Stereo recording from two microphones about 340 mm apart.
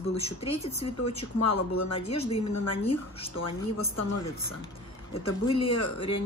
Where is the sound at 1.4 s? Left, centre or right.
Left.